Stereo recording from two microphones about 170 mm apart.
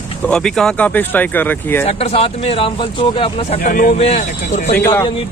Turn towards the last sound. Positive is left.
turn(degrees=10)  # may be behind; listen again after turning